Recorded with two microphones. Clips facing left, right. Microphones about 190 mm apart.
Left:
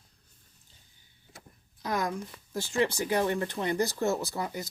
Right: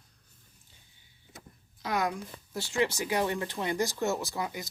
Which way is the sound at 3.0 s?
40° left (ahead or behind).